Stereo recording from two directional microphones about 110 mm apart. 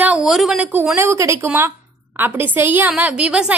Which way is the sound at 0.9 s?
25° right (ahead or behind).